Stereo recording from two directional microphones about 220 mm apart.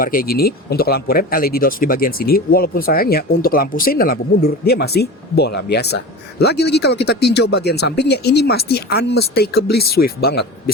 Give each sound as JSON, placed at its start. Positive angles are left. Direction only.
{"t": 0.0, "sound": "speech", "side_deg": 40}